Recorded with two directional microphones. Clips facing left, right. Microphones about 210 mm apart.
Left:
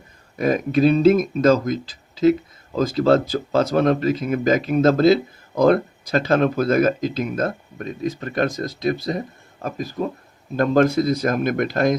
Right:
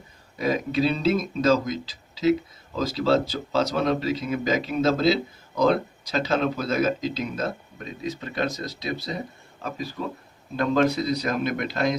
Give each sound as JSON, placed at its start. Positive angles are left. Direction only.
{"t": 0.3, "sound": "speech", "side_deg": 50}